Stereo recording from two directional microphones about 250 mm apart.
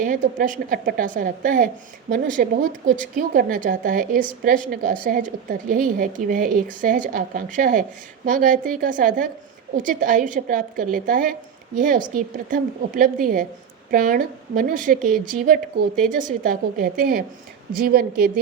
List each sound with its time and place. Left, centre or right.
0.0 s a woman's voice: right